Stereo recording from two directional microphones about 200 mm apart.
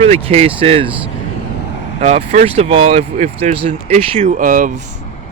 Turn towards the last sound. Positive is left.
turn(degrees=-45)  # may be behind; listen again after turning